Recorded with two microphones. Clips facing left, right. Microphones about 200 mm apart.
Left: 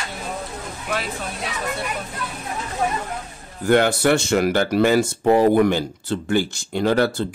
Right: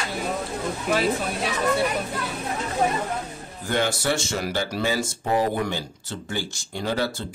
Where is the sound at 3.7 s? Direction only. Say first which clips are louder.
Left 8 dB; 60° left (ahead or behind).